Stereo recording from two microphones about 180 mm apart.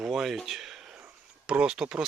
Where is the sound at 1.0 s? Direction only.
5° right (ahead or behind).